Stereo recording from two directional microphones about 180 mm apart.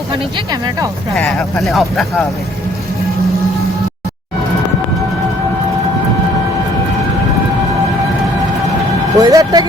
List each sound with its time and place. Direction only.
0.3 s speech: 20° right (ahead or behind)
1.1 s speech: centre (ahead or behind)
9.1 s speech: 20° right (ahead or behind)